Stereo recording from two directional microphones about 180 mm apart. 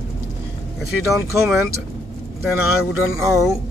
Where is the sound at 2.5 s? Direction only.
15° right (ahead or behind).